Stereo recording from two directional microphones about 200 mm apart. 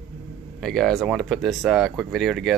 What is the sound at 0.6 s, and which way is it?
Speech, centre (ahead or behind).